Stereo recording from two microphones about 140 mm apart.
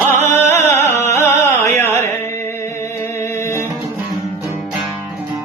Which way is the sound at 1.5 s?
15° left (ahead or behind).